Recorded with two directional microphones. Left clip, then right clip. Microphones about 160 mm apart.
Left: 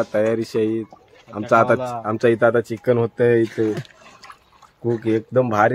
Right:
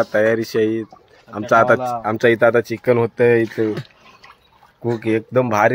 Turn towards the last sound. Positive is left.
turn(degrees=-5)  # may be behind; listen again after turning